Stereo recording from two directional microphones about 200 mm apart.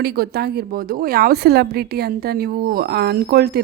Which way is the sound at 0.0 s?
50° right (ahead or behind).